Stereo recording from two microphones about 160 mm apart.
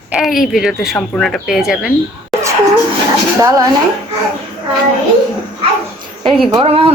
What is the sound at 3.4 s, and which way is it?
Speech, 20° right (ahead or behind).